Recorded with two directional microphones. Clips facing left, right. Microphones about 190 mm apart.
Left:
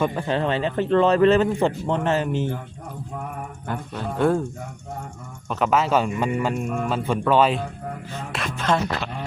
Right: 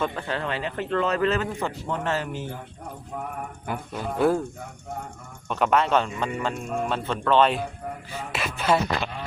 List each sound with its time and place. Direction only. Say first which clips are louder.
0.0 s speech: left 5 dB; 15° left (ahead or behind)
3.7 s speech: left 1 dB; 5° right (ahead or behind)
5.5 s speech: left 1 dB; centre (ahead or behind)
8.1 s music: even; 5° right (ahead or behind)